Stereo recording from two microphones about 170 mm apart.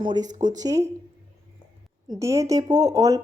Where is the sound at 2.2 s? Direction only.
20° right (ahead or behind).